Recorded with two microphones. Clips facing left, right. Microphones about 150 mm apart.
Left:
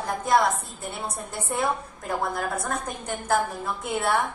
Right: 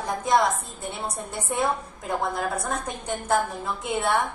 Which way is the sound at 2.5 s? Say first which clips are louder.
Even; 10° right (ahead or behind).